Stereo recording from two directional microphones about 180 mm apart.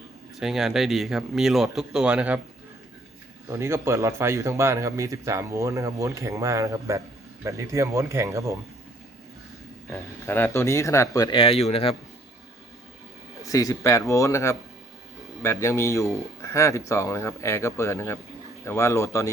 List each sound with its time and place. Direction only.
0.3 s speech: centre (ahead or behind)
3.5 s speech: 15° right (ahead or behind)
10.2 s speech: 10° left (ahead or behind); by 11.9 s 30° left (ahead or behind)
13.4 s speech: 20° left (ahead or behind)